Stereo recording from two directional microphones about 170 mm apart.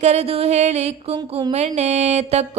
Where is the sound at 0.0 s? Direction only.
40° right (ahead or behind).